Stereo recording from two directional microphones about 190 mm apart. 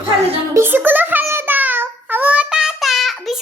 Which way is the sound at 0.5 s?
10° right (ahead or behind).